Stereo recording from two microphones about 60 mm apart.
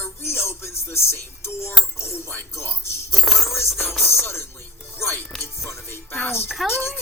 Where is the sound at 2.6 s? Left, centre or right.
Left.